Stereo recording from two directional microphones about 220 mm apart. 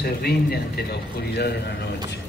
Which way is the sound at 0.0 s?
45° left (ahead or behind).